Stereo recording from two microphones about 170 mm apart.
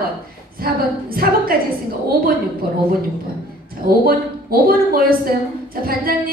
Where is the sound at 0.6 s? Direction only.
60° right (ahead or behind).